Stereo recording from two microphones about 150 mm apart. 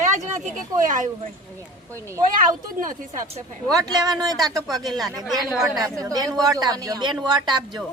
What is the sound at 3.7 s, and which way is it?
Speech, 25° right (ahead or behind).